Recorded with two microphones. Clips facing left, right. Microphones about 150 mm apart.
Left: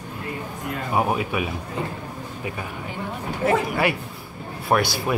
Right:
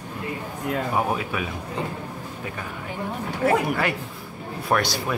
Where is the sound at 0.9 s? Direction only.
15° left (ahead or behind).